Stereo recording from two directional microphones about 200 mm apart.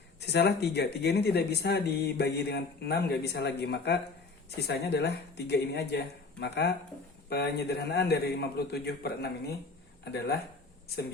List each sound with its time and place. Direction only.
0.2 s speech: 55° left (ahead or behind)